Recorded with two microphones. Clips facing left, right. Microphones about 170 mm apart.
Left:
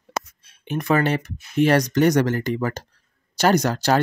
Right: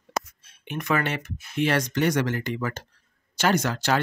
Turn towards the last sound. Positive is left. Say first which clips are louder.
# left 5 dB
turn(degrees=40)  # may be behind; listen again after turning